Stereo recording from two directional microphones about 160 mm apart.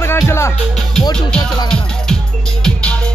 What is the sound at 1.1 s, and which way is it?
Music, 5° left (ahead or behind).